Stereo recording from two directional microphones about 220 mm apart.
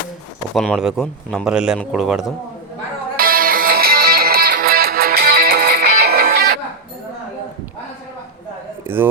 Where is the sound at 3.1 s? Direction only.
40° right (ahead or behind).